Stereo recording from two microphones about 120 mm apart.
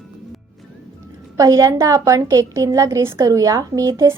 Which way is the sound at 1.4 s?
30° right (ahead or behind).